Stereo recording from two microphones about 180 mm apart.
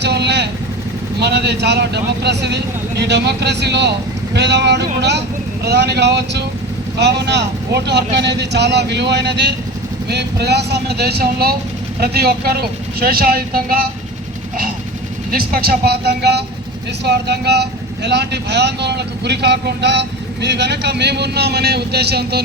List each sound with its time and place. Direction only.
0.0 s vehicle: 70° right (ahead or behind)
1.2 s speech: 70° right (ahead or behind); by 13.8 s 55° right (ahead or behind)
15.3 s speech: 55° right (ahead or behind)